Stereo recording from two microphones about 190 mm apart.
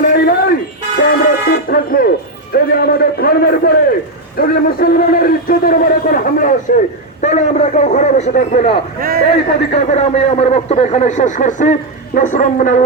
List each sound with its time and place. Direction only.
0.0 s a sound: 50° left (ahead or behind)
1.5 s music: 50° left (ahead or behind)
2.5 s a sound: 50° left (ahead or behind)
4.4 s a man's voice: 50° left (ahead or behind)
9.0 s a man's voice: 50° right (ahead or behind)
9.5 s a man's voice: 35° left (ahead or behind)